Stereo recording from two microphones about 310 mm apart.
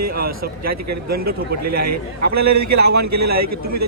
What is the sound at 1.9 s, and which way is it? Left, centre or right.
A man's voice, right.